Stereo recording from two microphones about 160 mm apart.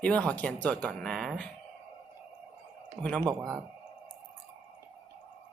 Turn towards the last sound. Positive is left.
turn(degrees=-20)  # may be behind; listen again after turning